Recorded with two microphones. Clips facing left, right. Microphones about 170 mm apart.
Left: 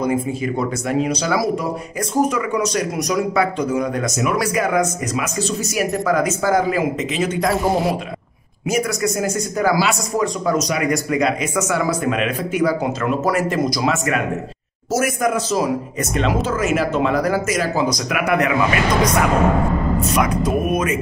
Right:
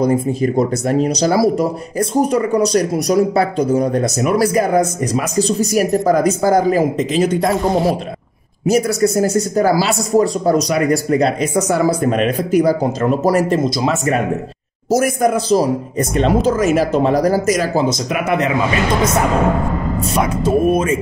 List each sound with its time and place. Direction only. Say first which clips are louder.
0.0 s speech: right 5 dB; 40° right (ahead or behind)
17.8 s speech: right 2 dB; 25° right (ahead or behind)
20.2 s speech: right 6 dB; 30° right (ahead or behind)